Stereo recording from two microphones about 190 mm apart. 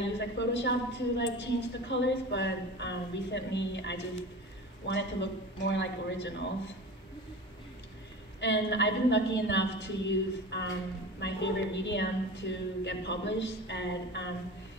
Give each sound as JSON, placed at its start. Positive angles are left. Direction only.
{"t": 0.4, "sound": "a woman's voice", "side_deg": 70}
{"t": 8.4, "sound": "a woman's voice", "side_deg": 65}